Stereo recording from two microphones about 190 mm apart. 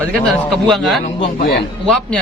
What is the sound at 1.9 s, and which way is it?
Speech, 5° left (ahead or behind).